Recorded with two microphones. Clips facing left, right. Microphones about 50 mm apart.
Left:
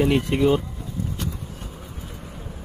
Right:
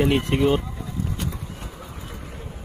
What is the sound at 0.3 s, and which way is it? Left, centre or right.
Speech, centre.